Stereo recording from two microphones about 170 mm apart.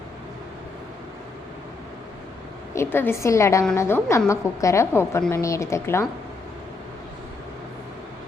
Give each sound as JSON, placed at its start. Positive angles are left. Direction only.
{"t": 2.7, "sound": "a woman's voice", "side_deg": 15}